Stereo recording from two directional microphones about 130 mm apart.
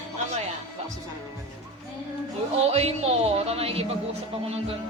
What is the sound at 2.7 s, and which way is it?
Speech, 50° right (ahead or behind).